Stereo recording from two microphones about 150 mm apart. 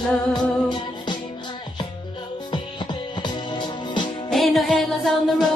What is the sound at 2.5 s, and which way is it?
Music, 30° left (ahead or behind).